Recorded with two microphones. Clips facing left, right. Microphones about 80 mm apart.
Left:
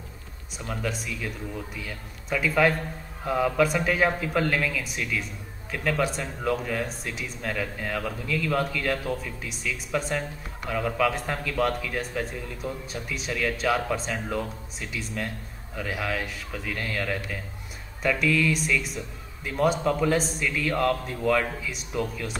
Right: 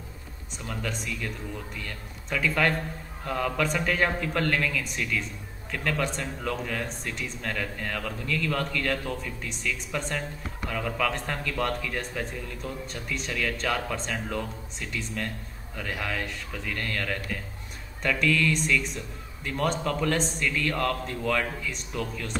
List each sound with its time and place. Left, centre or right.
0.6 s a man's voice: centre